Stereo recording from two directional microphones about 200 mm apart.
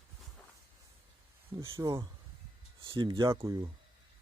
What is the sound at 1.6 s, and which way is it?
Speech, 15° right (ahead or behind).